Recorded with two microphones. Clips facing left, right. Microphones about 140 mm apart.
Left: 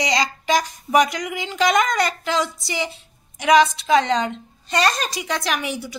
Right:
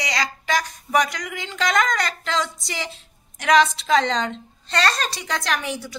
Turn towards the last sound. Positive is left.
turn(degrees=5)  # may be behind; listen again after turning